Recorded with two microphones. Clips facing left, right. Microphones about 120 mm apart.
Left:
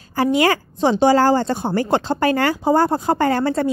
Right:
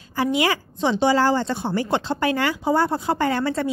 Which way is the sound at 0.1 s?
45° left (ahead or behind).